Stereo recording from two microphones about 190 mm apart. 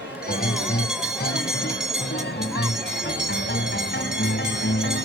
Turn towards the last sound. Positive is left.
turn(degrees=70)  # may be behind; listen again after turning